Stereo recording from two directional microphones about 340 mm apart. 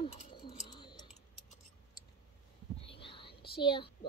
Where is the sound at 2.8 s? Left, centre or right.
Centre.